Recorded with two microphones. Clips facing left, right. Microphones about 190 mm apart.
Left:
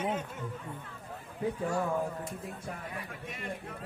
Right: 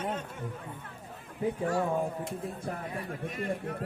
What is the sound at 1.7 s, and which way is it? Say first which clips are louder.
Speech: right 2 dB; 25° right (ahead or behind).